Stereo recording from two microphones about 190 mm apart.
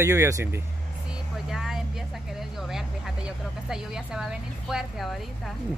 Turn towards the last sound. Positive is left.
turn(degrees=0)  # may be behind; listen again after turning